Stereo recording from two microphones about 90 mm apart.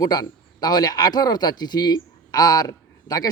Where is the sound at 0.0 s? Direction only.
45° left (ahead or behind).